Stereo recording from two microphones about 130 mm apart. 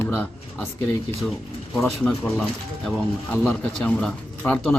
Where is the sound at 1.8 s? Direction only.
5° left (ahead or behind).